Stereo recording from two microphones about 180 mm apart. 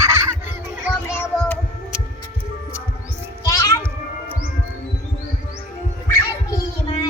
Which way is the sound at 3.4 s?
20° left (ahead or behind).